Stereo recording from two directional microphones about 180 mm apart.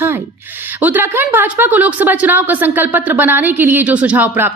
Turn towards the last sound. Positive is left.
turn(degrees=-10)  # may be behind; listen again after turning